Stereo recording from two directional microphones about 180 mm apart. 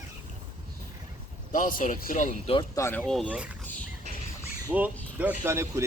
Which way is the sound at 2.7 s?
15° left (ahead or behind).